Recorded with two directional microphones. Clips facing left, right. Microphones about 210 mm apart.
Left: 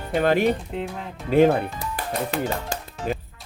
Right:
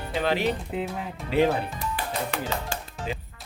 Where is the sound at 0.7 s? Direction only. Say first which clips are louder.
Even; 5° right (ahead or behind).